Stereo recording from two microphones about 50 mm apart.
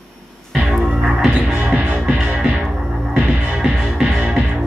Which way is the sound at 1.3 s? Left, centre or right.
Right.